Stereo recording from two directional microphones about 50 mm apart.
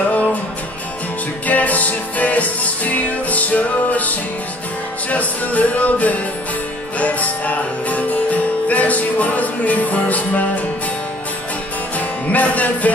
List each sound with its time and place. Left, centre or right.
0.1 s music: left
1.5 s music: left
12.3 s music: left